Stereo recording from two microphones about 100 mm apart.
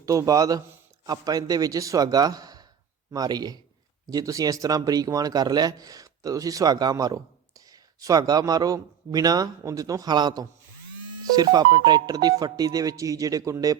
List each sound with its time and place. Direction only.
0.0 s speech: 35° right (ahead or behind)